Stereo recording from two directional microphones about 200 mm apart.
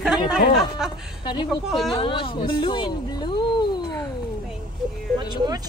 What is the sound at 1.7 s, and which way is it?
Speech, centre (ahead or behind).